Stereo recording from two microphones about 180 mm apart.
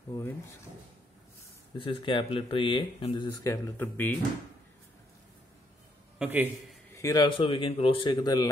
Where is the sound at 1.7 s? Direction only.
30° left (ahead or behind); by 4.1 s 10° left (ahead or behind).